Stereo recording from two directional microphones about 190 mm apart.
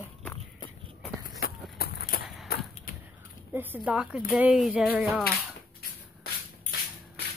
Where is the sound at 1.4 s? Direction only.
55° left (ahead or behind).